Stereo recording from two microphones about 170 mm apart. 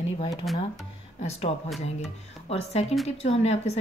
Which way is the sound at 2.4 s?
40° left (ahead or behind).